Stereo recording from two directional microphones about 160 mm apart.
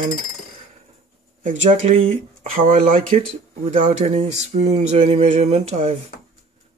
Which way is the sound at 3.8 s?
40° right (ahead or behind).